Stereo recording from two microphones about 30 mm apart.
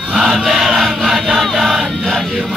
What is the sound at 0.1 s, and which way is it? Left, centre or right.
Crowd, centre.